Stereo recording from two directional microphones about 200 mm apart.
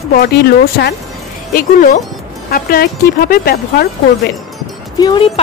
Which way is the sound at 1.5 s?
45° left (ahead or behind).